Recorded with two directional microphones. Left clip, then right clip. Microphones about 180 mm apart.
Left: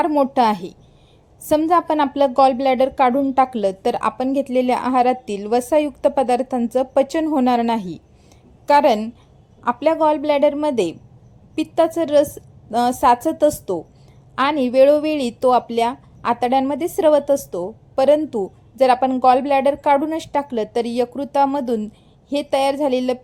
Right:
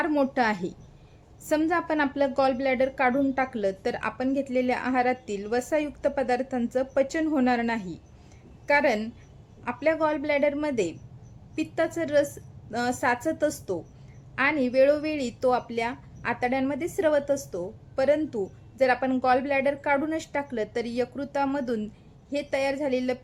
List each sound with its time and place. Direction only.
0.3 s a woman's voice: 25° left (ahead or behind)